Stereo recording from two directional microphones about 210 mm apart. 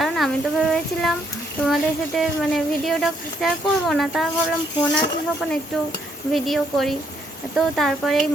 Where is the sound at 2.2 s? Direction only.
Centre (ahead or behind).